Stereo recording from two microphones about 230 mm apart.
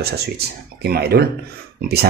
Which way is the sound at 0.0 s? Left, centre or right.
Right.